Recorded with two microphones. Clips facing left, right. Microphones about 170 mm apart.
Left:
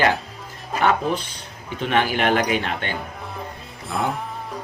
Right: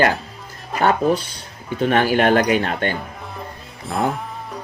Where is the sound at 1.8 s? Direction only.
45° right (ahead or behind).